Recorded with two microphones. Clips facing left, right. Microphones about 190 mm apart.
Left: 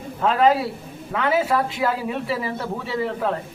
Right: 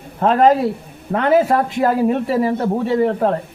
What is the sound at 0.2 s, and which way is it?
Speech, 45° right (ahead or behind).